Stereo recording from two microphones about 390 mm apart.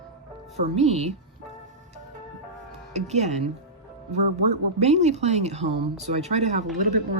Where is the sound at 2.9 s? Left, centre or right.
Centre.